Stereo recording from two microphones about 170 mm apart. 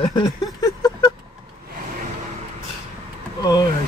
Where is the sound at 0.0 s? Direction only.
25° left (ahead or behind).